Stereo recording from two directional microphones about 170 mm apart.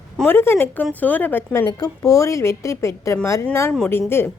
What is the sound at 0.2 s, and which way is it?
A woman's voice, 10° left (ahead or behind).